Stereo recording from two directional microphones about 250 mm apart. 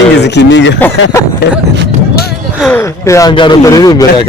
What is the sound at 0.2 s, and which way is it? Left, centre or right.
Speech, left.